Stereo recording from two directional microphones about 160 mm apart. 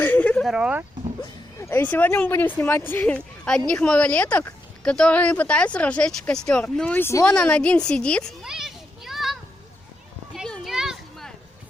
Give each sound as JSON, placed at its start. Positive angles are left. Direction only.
{"t": 0.0, "sound": "a sound", "side_deg": 10}
{"t": 1.2, "sound": "speech", "side_deg": 20}
{"t": 7.3, "sound": "a child's voice", "side_deg": 5}
{"t": 10.3, "sound": "children playing", "side_deg": 0}